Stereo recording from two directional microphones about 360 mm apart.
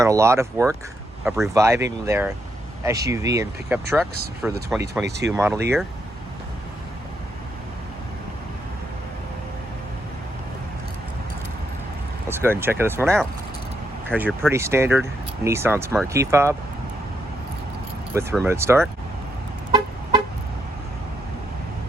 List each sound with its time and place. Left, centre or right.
0.0 s speech: centre
5.0 s speech: right
5.3 s speech: centre
12.3 s speech: centre
18.1 s speech: centre